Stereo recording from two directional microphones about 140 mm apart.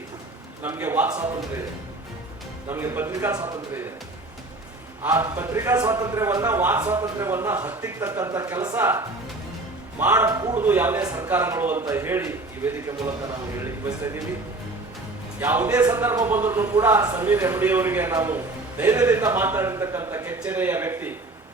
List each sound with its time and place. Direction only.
0.6 s a man's voice: 15° right (ahead or behind)
2.6 s a man's voice: 15° right (ahead or behind)
5.0 s a man's voice: 20° right (ahead or behind)
15.4 s a man's voice: 15° right (ahead or behind)